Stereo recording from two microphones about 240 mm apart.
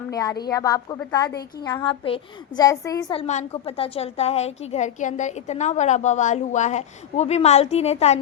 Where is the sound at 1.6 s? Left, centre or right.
Centre.